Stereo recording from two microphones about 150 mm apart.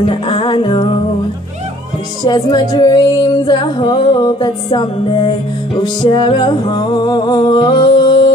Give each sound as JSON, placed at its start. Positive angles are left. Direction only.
{"t": 0.1, "sound": "music", "side_deg": 35}
{"t": 2.2, "sound": "music", "side_deg": 30}